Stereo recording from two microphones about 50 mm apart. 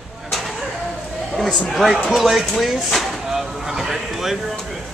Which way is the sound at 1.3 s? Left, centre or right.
Centre.